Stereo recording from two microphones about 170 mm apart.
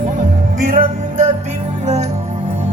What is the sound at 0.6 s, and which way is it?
Music, 55° right (ahead or behind).